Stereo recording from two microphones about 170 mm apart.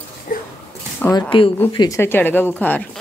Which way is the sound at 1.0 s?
10° left (ahead or behind).